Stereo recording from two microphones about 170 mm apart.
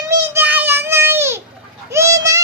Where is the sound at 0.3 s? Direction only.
10° right (ahead or behind).